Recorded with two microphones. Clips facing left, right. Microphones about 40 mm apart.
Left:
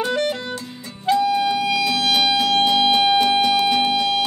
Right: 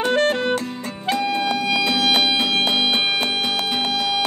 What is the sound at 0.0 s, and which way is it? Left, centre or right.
Music, right.